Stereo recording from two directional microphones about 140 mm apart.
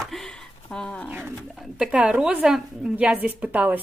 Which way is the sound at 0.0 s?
5° left (ahead or behind).